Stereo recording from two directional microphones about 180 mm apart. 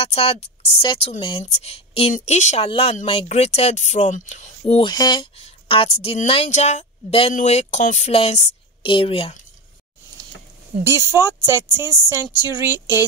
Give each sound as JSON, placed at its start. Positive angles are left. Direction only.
{"t": 0.0, "sound": "speech", "side_deg": 35}
{"t": 10.8, "sound": "speech", "side_deg": -15}
{"t": 12.7, "sound": "speech", "side_deg": 20}